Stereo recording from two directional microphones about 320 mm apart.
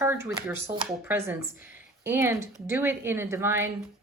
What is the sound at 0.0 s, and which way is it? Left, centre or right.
Speech, centre.